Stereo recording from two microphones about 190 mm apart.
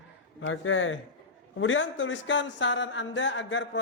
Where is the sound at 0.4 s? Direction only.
90° left.